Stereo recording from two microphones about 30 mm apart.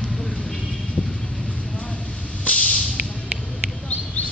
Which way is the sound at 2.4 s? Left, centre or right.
Left.